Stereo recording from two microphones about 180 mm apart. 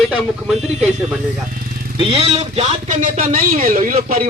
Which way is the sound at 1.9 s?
30° right (ahead or behind).